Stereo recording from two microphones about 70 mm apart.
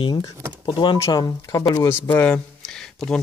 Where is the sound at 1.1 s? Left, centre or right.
Left.